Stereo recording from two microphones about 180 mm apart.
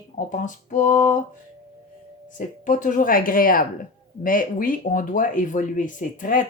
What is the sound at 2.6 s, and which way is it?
Speech, 45° left (ahead or behind).